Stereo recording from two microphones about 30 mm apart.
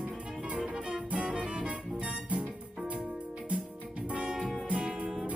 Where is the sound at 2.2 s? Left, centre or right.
Right.